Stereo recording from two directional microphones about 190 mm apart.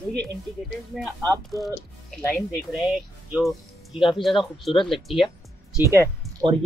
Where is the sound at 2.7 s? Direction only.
5° right (ahead or behind).